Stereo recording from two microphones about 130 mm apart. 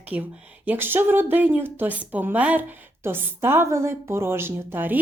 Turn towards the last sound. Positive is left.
turn(degrees=-15)  # may be behind; listen again after turning